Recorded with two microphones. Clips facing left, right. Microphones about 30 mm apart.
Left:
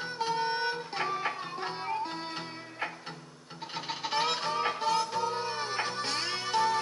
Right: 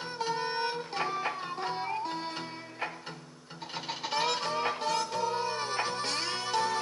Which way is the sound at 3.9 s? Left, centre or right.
Centre.